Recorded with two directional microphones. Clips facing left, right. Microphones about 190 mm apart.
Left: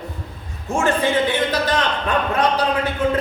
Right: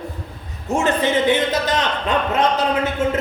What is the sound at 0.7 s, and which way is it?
A man's voice, 20° right (ahead or behind).